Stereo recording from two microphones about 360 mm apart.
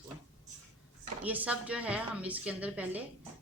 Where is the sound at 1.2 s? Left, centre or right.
Centre.